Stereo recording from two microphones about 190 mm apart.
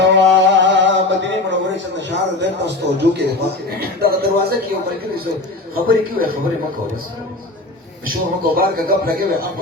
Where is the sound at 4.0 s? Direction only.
55° right (ahead or behind).